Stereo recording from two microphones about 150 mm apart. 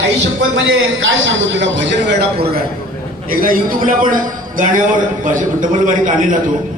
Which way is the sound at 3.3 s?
70° right (ahead or behind).